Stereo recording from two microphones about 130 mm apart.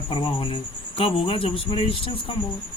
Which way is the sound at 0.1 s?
35° left (ahead or behind).